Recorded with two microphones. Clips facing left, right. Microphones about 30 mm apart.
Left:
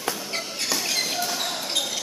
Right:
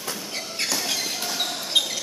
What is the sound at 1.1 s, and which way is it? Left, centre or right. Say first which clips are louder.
Basketball bounce: left 1 dB; centre.